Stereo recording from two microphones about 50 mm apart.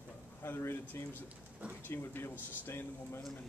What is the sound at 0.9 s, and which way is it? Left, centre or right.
Speech, left.